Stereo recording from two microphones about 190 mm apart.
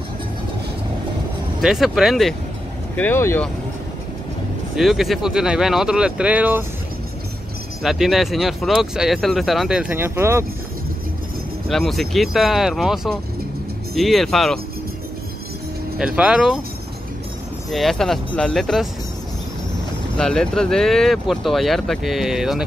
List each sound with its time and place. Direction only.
1.6 s speech: centre (ahead or behind)
3.0 s speech: 10° left (ahead or behind)
4.7 s speech: centre (ahead or behind)
7.8 s speech: centre (ahead or behind)
11.7 s speech: centre (ahead or behind)
16.2 s speech: 5° right (ahead or behind)
17.6 s speech: centre (ahead or behind)
20.2 s speech: 5° left (ahead or behind)